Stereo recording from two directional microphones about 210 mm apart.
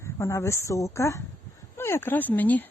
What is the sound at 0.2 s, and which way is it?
Speech, 15° left (ahead or behind).